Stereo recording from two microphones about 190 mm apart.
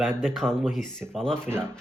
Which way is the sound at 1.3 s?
10° right (ahead or behind).